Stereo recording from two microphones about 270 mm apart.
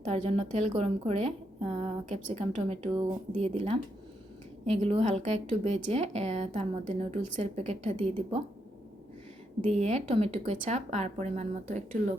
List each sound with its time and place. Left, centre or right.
0.1 s a woman's voice: right
9.6 s speech: right